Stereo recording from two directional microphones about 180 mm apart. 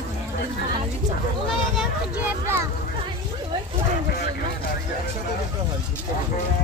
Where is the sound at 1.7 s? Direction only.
10° right (ahead or behind).